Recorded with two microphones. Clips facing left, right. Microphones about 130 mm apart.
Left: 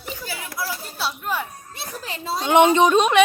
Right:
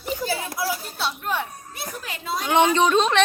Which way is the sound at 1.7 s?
30° left (ahead or behind).